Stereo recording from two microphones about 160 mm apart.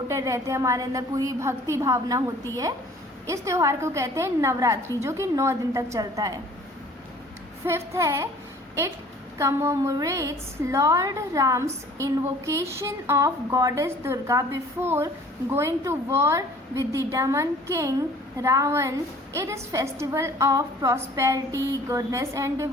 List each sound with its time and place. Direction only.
0.1 s a woman's voice: 20° right (ahead or behind)
7.6 s a woman's voice: 15° right (ahead or behind)
9.4 s a woman's voice: 20° right (ahead or behind)